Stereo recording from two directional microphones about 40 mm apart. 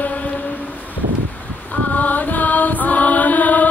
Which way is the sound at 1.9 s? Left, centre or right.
Left.